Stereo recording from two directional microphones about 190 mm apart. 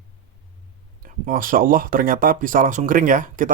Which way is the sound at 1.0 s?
45° right (ahead or behind).